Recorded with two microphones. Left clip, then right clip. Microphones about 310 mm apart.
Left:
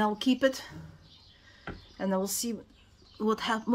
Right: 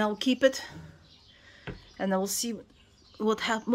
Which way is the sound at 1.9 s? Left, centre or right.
Centre.